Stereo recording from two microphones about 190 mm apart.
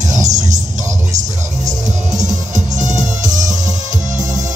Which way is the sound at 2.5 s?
40° right (ahead or behind).